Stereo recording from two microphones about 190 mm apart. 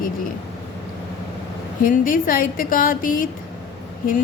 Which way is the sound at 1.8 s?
45° left (ahead or behind).